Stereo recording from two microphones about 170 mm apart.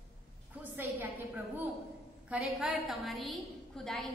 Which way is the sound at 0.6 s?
10° right (ahead or behind).